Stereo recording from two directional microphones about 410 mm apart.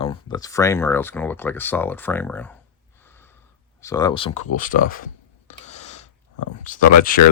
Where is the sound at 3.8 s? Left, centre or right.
Centre.